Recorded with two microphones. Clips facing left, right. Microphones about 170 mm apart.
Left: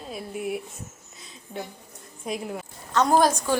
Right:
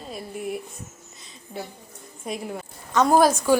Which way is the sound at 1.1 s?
Centre (ahead or behind).